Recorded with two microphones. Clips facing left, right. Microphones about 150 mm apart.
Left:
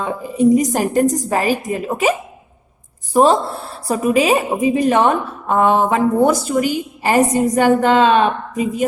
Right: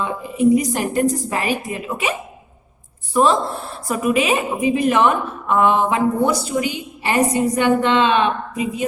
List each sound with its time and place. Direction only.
0.0 s a woman's voice: 35° left (ahead or behind)